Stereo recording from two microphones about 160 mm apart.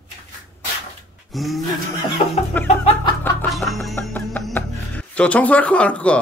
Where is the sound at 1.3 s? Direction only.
Centre (ahead or behind).